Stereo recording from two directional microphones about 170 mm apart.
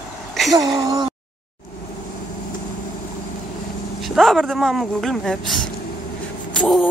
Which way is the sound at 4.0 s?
Centre (ahead or behind).